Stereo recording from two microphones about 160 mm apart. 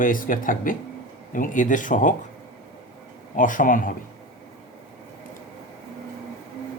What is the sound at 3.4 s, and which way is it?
Speech, 55° left (ahead or behind).